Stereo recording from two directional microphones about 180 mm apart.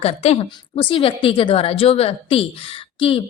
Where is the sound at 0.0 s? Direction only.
35° left (ahead or behind).